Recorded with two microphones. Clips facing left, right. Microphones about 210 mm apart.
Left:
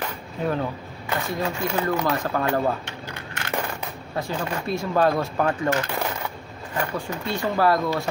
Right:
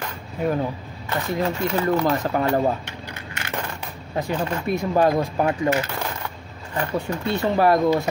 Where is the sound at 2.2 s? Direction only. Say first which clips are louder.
Right 3 dB; 20° right (ahead or behind).